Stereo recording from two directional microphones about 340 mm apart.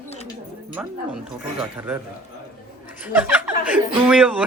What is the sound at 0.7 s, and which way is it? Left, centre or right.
Speech, centre.